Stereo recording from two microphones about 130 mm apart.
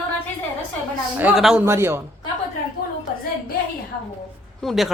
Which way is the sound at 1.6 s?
20° right (ahead or behind).